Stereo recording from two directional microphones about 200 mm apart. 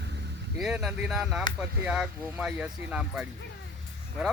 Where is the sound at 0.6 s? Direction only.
Centre (ahead or behind).